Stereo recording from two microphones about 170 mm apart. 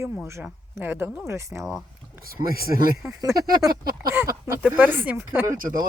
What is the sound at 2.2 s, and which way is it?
Speech, 60° right (ahead or behind).